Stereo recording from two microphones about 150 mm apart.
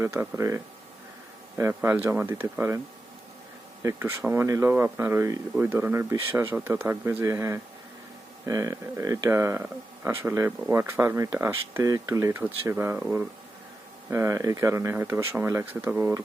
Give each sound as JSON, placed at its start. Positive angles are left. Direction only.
{"t": 0.0, "sound": "speech", "side_deg": -20}
{"t": 3.8, "sound": "speech", "side_deg": -15}